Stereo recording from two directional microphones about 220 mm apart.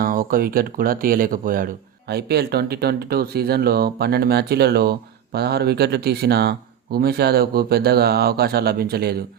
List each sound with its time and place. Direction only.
0.0 s speech: 40° right (ahead or behind)